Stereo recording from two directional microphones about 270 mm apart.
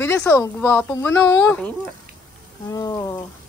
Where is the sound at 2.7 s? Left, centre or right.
Centre.